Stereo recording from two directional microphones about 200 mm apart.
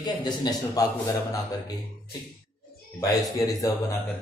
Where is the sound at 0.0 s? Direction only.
20° left (ahead or behind).